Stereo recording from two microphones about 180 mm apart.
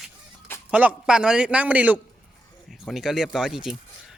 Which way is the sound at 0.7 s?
10° right (ahead or behind).